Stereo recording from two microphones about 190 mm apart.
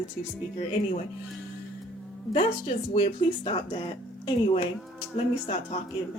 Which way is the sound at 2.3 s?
35° left (ahead or behind).